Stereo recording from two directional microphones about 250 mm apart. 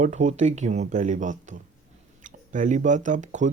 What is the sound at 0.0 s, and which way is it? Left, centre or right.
Speech, right.